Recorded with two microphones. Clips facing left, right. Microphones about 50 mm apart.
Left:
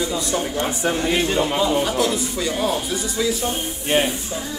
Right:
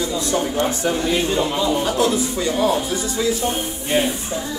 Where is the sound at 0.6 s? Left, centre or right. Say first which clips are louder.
Right 2 dB; left.